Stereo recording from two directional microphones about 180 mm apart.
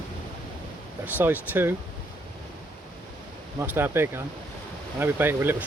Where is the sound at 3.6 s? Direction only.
15° right (ahead or behind).